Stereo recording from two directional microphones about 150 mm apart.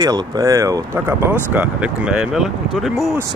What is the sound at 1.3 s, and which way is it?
Speech, 10° right (ahead or behind).